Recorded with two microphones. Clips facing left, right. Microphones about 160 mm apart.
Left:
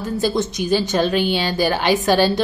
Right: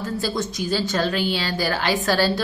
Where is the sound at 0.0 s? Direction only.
20° left (ahead or behind).